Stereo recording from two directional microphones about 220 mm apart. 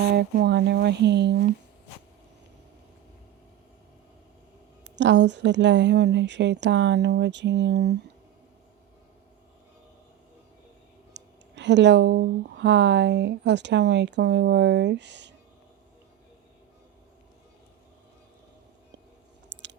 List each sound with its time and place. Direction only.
0.2 s speech: 50° right (ahead or behind)
4.9 s speech: 55° right (ahead or behind)
11.1 s speech: 55° right (ahead or behind)
19.5 s chewing: 50° right (ahead or behind)